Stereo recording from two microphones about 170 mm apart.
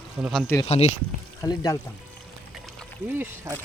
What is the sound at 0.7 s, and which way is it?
Speech, 40° left (ahead or behind).